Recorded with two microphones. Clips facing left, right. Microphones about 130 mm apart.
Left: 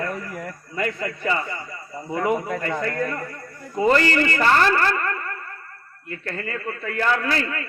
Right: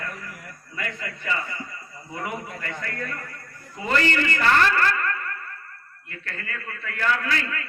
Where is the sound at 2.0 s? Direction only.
65° left (ahead or behind).